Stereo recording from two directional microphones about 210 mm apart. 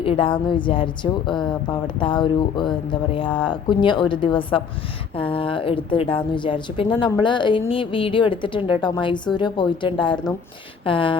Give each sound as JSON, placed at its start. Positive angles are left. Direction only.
{"t": 0.0, "sound": "a woman's voice", "side_deg": 25}